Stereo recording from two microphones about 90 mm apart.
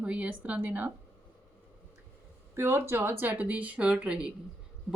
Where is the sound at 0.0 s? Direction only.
15° right (ahead or behind).